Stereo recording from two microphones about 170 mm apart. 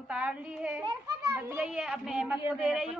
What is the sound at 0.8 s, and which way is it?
Children playing, 25° right (ahead or behind).